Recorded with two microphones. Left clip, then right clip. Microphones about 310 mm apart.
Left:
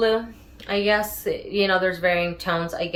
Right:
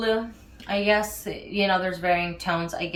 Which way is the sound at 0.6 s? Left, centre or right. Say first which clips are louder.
Left 1 dB; centre.